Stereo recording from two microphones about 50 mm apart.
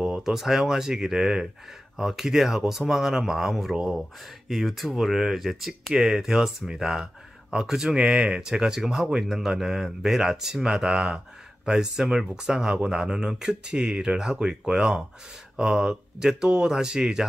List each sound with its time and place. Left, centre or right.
0.0 s speech: centre